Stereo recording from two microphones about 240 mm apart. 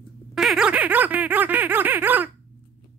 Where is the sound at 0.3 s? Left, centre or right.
Centre.